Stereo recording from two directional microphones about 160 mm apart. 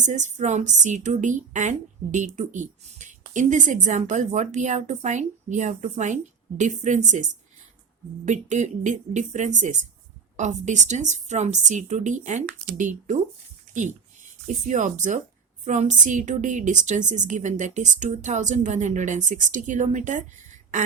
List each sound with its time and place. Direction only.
0.0 s a woman's voice: 50° right (ahead or behind)
14.4 s a woman's voice: 50° right (ahead or behind)